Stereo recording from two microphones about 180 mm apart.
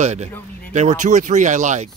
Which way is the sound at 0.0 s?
40° right (ahead or behind).